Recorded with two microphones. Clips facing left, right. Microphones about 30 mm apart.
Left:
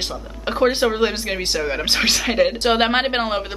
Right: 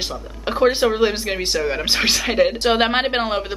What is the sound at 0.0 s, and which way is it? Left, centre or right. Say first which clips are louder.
Speech: even; centre.